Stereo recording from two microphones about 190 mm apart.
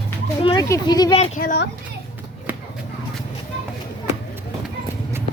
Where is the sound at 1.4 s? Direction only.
50° left (ahead or behind).